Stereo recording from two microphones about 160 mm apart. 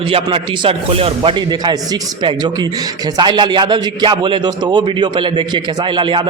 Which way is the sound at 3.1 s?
30° right (ahead or behind).